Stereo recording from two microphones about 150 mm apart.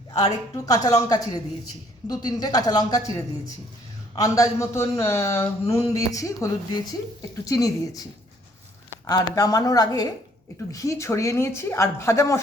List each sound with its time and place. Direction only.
0.2 s speech: 20° left (ahead or behind)
9.0 s speech: 25° left (ahead or behind)